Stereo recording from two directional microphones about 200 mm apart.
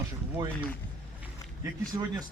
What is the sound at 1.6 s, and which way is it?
Speech, 15° right (ahead or behind).